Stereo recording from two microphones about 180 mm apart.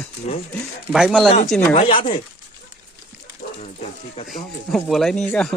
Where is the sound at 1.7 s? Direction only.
30° left (ahead or behind).